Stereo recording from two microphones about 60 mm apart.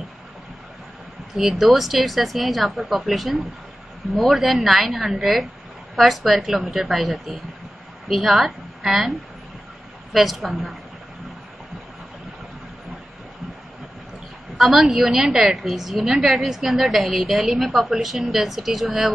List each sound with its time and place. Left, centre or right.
1.3 s a woman's voice: centre
10.1 s a woman's voice: centre
14.6 s a woman's voice: centre